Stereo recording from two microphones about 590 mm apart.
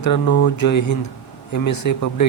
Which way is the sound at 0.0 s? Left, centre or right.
Left.